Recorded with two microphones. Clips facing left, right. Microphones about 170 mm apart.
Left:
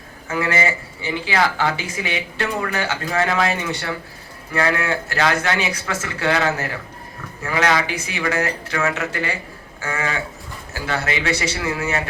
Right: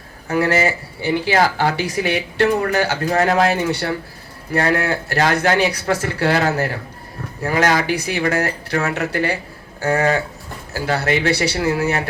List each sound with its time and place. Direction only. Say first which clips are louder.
0.3 s speech: right 4 dB; 40° right (ahead or behind)